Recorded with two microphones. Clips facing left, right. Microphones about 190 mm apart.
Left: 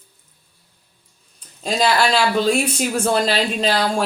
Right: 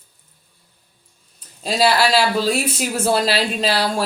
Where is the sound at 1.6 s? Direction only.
5° right (ahead or behind).